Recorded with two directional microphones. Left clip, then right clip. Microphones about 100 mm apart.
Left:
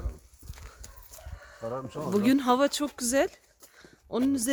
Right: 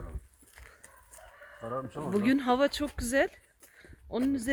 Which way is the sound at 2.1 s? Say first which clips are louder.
Left 3 dB; 30° left (ahead or behind).